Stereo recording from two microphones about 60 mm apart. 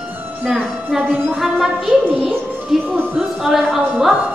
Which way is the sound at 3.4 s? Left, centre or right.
Centre.